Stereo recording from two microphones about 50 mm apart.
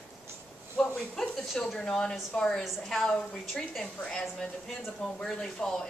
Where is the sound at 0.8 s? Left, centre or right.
Centre.